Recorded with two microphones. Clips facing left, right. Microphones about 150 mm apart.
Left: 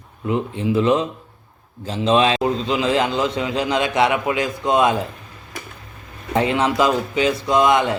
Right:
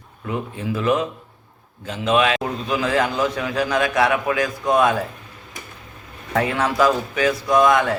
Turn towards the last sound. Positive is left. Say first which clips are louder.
# even
turn(degrees=20)  # may be behind; listen again after turning